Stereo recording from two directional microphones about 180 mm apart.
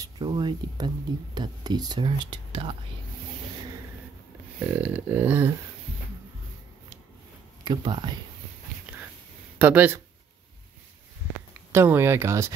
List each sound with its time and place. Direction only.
0.0 s speech: 25° right (ahead or behind)
4.7 s speech: 10° right (ahead or behind)
7.6 s speech: 25° right (ahead or behind)
9.6 s speech: 10° right (ahead or behind)
11.7 s speech: 10° right (ahead or behind)